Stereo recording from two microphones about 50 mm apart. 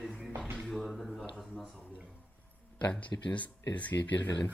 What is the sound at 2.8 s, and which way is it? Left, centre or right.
Speech, left.